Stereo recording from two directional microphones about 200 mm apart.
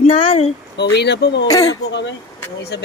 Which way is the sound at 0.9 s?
55° left (ahead or behind).